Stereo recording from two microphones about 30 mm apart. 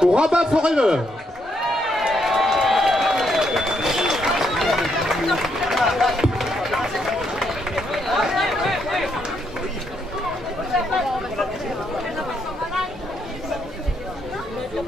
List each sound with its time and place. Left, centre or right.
0.2 s a man's voice: right
1.7 s run: centre
2.1 s a sound: centre
3.7 s run: centre
5.6 s a sound: centre
6.4 s run: centre
8.4 s chatter: centre